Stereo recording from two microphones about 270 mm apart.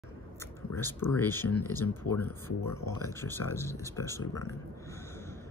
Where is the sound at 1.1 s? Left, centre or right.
Centre.